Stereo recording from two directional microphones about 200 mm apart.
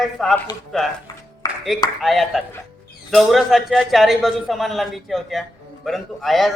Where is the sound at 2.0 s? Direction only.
Centre (ahead or behind).